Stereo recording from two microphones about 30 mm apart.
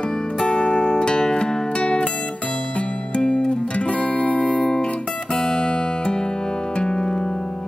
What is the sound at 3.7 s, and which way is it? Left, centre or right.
Music, left.